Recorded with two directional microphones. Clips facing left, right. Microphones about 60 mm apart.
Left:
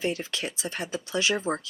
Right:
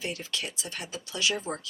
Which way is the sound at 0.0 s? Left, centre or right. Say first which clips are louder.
Left 5 dB; left.